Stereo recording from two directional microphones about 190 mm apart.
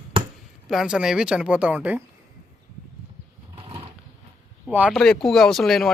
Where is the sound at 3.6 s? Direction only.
25° right (ahead or behind).